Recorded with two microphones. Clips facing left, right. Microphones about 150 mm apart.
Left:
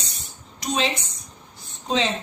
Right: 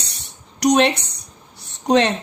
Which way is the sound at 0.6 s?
75° right (ahead or behind).